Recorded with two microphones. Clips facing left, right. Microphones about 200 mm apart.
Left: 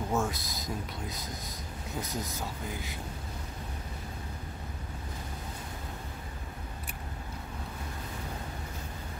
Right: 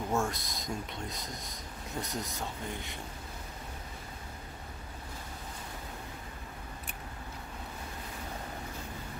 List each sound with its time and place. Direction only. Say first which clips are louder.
0.1 s speech: even; centre (ahead or behind)